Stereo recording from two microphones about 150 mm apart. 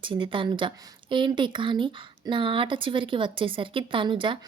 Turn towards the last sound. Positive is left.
turn(degrees=-35)  # may be behind; listen again after turning